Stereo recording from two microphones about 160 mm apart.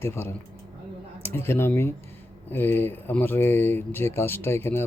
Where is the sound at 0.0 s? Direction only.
15° left (ahead or behind).